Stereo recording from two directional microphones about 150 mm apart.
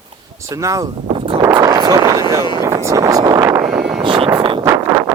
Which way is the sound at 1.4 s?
20° right (ahead or behind).